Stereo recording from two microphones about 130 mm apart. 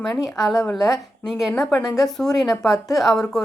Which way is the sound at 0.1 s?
Centre (ahead or behind).